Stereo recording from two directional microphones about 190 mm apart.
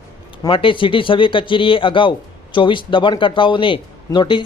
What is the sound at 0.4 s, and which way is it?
Speech, 25° left (ahead or behind).